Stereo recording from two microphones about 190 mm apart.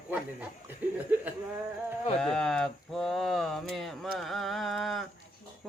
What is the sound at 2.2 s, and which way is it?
Speech, 5° left (ahead or behind).